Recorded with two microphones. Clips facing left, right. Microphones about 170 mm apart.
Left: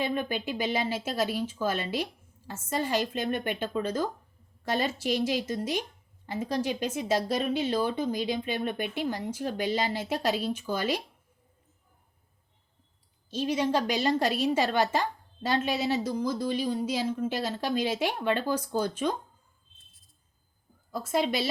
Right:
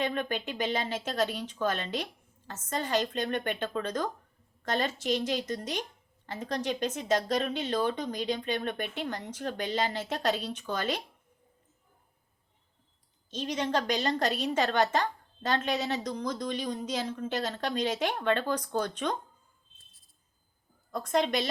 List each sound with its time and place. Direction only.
0.0 s a woman's voice: 10° left (ahead or behind)
13.3 s a woman's voice: 10° left (ahead or behind)
20.9 s a woman's voice: 5° left (ahead or behind)